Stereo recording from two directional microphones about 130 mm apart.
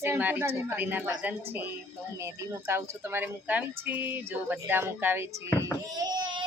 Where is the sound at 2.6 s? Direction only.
15° right (ahead or behind).